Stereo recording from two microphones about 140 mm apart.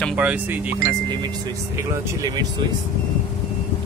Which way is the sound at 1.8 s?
25° right (ahead or behind).